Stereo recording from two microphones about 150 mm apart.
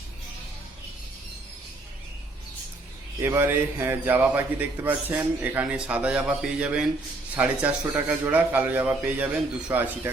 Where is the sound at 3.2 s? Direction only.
15° right (ahead or behind).